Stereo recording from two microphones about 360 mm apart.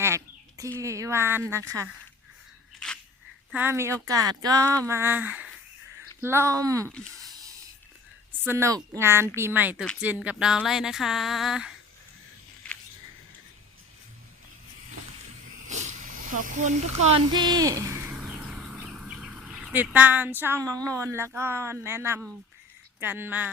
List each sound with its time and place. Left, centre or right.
0.0 s chicken: centre
0.8 s speech: centre
3.5 s a woman's voice: centre
6.8 s a woman's voice: centre
8.3 s a woman's voice: centre
12.7 s a sound: centre
15.6 s a sound: centre
18.9 s a woman's voice: centre